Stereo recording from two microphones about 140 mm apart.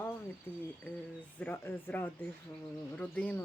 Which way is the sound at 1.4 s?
10° left (ahead or behind).